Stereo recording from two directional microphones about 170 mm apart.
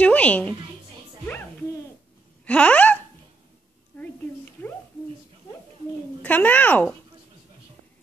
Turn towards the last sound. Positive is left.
turn(degrees=10)  # may be behind; listen again after turning